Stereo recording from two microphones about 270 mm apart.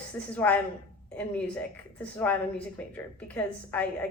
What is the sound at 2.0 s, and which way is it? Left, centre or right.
A woman's voice, centre.